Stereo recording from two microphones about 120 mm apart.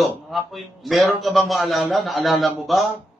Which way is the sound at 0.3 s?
Centre (ahead or behind).